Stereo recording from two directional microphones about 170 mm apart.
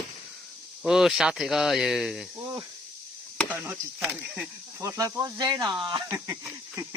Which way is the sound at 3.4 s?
10° right (ahead or behind).